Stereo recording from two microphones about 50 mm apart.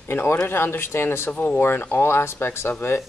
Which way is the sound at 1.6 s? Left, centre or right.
Left.